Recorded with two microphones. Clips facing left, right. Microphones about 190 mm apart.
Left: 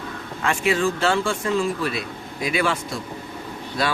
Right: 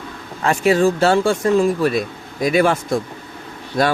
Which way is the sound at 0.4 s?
40° right (ahead or behind).